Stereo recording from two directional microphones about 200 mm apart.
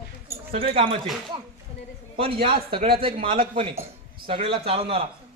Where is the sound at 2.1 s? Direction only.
30° right (ahead or behind).